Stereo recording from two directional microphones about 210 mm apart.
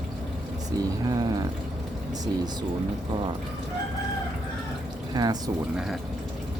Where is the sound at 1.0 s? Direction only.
20° right (ahead or behind).